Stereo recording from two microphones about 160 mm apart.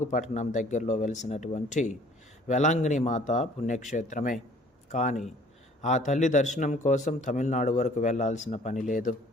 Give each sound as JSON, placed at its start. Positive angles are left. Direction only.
{"t": 0.0, "sound": "a man's voice", "side_deg": 50}